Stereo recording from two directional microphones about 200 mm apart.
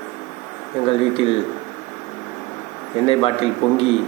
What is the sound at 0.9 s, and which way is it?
Speech, 30° left (ahead or behind).